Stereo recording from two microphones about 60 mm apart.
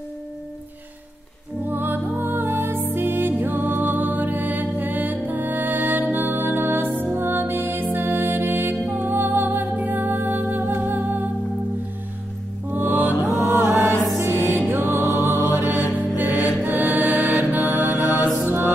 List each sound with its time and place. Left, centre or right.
1.7 s music: right
12.7 s music: right
16.6 s mantra: right